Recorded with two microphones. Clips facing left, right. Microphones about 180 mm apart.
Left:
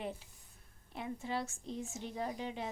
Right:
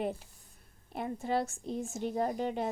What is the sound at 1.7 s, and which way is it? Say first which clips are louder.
Speech: right 6 dB; 35° right (ahead or behind).